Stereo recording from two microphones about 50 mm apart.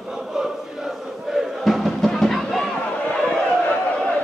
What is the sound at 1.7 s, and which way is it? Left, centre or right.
Music, centre.